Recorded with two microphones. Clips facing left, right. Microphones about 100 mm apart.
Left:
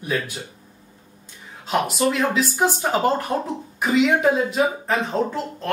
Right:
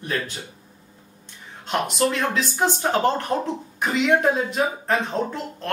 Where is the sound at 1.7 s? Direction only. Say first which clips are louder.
Left 2 dB; 5° left (ahead or behind).